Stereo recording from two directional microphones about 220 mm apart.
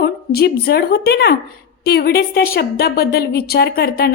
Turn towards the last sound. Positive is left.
turn(degrees=45)  # may be behind; listen again after turning